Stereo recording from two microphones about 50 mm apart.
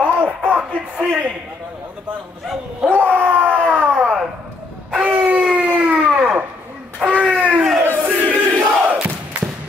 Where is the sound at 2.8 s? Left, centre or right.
Right.